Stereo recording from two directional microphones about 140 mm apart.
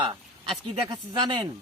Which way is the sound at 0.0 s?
35° right (ahead or behind).